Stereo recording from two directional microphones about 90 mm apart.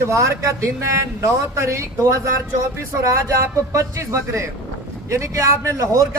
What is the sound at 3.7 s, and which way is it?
A man's voice, 35° right (ahead or behind).